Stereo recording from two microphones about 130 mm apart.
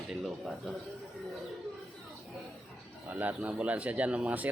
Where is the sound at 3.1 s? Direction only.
10° right (ahead or behind).